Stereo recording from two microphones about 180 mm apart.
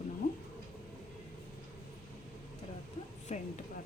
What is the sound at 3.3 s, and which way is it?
Speech, 40° left (ahead or behind).